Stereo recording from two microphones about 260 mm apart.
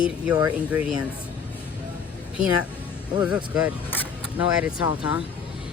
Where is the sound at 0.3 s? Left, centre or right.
Centre.